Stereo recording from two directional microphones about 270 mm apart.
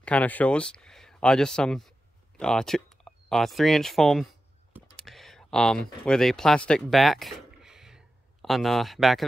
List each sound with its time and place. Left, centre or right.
0.0 s speech: centre
4.7 s computer keyboard: centre
6.0 s speech: centre